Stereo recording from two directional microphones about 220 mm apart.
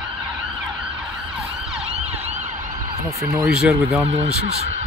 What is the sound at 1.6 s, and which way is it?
Emergency vehicle, 5° right (ahead or behind).